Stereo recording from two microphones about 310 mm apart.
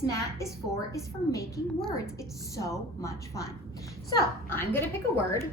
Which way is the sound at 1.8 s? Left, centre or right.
Centre.